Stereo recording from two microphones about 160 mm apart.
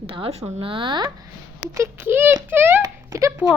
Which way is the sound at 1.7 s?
15° right (ahead or behind).